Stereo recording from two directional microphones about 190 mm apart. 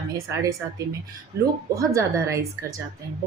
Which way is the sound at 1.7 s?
15° right (ahead or behind).